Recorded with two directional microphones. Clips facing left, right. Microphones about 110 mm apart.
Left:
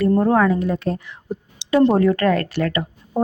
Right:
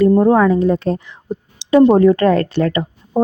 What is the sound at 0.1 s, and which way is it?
A woman's voice, 20° right (ahead or behind).